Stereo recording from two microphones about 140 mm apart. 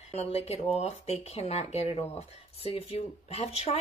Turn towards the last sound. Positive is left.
turn(degrees=45)  # may be behind; listen again after turning